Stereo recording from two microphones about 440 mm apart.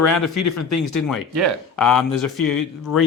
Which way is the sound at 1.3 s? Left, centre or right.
Right.